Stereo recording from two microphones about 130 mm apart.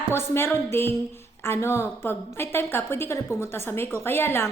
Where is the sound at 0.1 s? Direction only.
20° left (ahead or behind).